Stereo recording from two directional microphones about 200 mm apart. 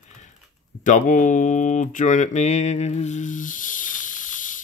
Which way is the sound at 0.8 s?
40° left (ahead or behind).